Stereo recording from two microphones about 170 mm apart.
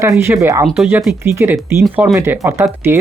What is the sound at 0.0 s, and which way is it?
Speech, 15° right (ahead or behind).